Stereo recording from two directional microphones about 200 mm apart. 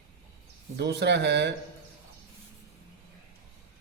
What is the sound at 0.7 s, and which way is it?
Speech, 55° right (ahead or behind).